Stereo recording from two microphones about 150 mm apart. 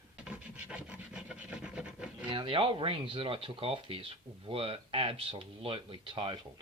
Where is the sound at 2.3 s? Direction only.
35° right (ahead or behind).